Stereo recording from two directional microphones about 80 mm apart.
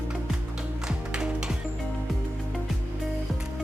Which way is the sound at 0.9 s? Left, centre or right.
Centre.